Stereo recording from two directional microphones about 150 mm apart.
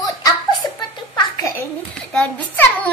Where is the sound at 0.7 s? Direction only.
25° left (ahead or behind).